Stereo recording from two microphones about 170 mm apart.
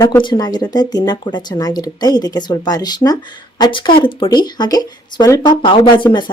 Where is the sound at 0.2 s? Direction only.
25° left (ahead or behind).